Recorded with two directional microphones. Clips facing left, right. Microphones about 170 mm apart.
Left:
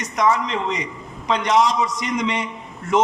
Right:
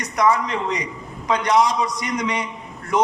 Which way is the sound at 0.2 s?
10° right (ahead or behind).